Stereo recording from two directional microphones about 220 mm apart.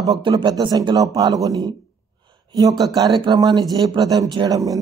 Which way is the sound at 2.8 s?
20° right (ahead or behind).